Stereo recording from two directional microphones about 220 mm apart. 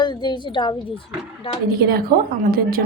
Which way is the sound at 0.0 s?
20° left (ahead or behind).